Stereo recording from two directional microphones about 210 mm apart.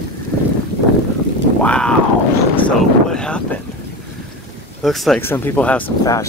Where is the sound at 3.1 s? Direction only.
5° left (ahead or behind).